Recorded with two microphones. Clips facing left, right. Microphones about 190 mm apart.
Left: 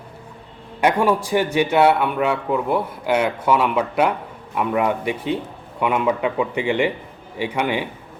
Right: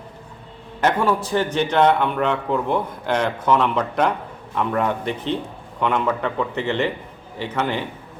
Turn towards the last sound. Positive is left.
turn(degrees=10)  # may be behind; listen again after turning